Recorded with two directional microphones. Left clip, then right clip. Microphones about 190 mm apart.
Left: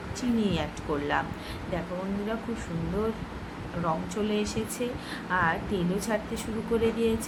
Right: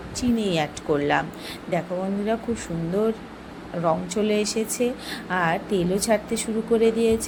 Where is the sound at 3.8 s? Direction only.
30° right (ahead or behind).